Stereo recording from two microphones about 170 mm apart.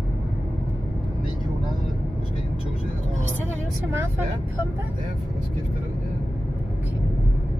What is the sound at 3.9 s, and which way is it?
Speech, 15° right (ahead or behind).